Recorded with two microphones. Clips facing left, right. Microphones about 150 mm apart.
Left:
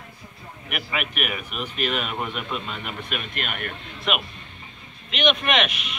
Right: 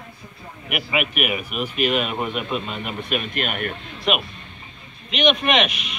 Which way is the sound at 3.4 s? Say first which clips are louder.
Right 5 dB; 50° right (ahead or behind).